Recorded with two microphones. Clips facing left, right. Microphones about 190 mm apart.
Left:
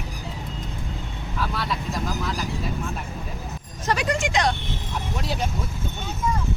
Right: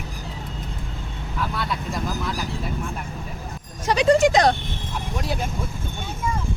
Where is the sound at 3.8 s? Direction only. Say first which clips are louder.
Right 6 dB; 20° right (ahead or behind).